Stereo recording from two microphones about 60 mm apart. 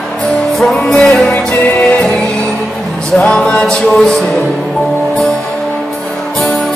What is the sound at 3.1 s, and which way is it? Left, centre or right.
Music, centre.